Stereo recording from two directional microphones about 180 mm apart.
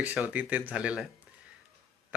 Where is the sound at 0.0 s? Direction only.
5° right (ahead or behind).